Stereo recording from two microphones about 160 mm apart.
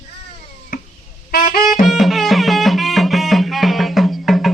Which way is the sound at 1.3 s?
65° left (ahead or behind).